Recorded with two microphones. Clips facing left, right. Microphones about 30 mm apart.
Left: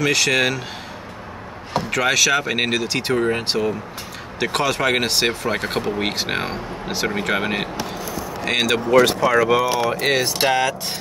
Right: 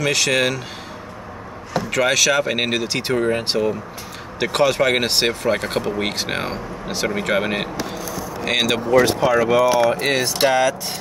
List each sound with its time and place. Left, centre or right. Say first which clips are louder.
0.0 s speech: even; centre
1.9 s speech: right 1 dB; centre
8.0 s a sound: even; left
8.5 s speech: even; centre
9.3 s speech: right 1 dB; centre